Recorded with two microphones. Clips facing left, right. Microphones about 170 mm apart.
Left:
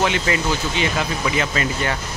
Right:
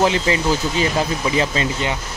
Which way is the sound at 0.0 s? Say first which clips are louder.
Right 3 dB; 30° right (ahead or behind).